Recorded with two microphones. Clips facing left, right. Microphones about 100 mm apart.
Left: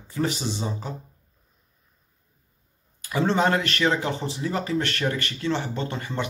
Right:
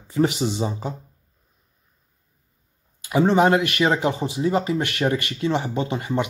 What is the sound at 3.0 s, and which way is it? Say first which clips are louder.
Speech: right 5 dB; 20° right (ahead or behind).